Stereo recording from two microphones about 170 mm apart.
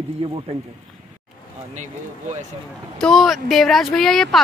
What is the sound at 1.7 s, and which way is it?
Speech, 45° right (ahead or behind).